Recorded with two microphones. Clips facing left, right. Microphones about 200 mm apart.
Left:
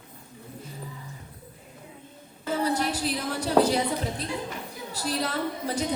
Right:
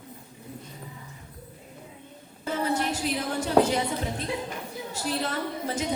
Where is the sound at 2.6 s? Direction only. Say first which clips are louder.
Even; 35° left (ahead or behind).